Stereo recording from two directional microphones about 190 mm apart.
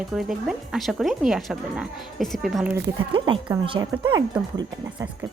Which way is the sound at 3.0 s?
25° right (ahead or behind).